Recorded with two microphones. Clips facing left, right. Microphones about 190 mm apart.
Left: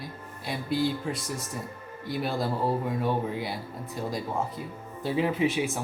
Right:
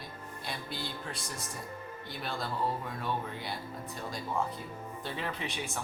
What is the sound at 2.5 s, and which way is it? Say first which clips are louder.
Speech: left 7 dB; 35° left (ahead or behind).